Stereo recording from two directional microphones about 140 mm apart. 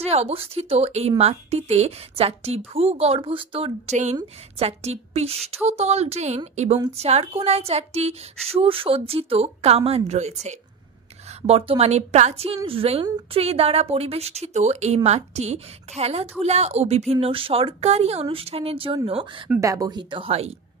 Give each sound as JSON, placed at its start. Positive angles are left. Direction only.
{"t": 0.0, "sound": "a woman's voice", "side_deg": -45}
{"t": 3.9, "sound": "a woman's voice", "side_deg": -55}
{"t": 4.6, "sound": "a woman's voice", "side_deg": -45}
{"t": 19.6, "sound": "a woman's voice", "side_deg": -25}